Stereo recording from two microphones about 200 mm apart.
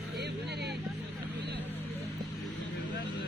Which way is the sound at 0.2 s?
55° right (ahead or behind).